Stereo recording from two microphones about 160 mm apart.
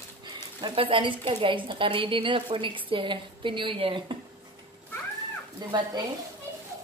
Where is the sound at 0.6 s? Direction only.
30° right (ahead or behind).